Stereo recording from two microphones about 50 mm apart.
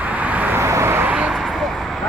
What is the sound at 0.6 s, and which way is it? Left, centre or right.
Vehicle, right.